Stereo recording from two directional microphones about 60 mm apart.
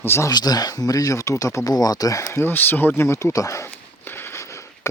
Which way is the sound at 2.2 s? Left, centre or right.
Left.